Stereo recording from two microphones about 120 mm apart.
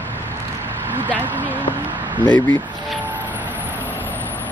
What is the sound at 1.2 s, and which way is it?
Speech, 15° right (ahead or behind).